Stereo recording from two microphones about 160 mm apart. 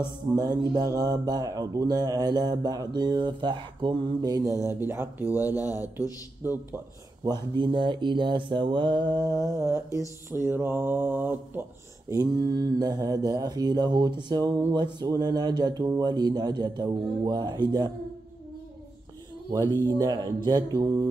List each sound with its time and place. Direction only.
0.4 s mantra: 25° right (ahead or behind)
5.5 s speech: 20° left (ahead or behind)
6.4 s speech: 15° right (ahead or behind)
7.2 s mantra: 30° right (ahead or behind)
19.5 s mantra: 20° right (ahead or behind)